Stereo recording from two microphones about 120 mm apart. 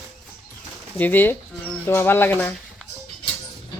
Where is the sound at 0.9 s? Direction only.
15° left (ahead or behind).